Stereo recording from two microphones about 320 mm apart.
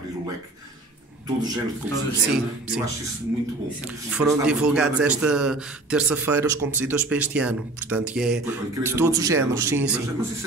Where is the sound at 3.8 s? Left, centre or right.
Centre.